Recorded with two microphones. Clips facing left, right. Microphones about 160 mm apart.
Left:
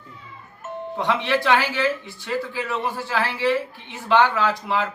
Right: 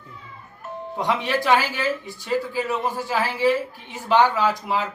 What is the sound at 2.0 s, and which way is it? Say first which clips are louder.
Speech: right 2 dB; 40° right (ahead or behind).